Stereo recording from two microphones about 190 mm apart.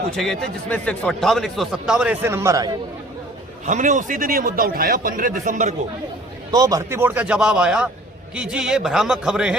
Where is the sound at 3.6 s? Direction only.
40° right (ahead or behind).